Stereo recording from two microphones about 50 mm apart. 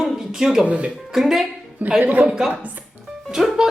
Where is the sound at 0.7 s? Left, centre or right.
Right.